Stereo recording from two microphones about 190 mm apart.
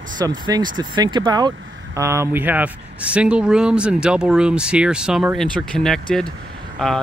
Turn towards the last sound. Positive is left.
turn(degrees=5)  # may be behind; listen again after turning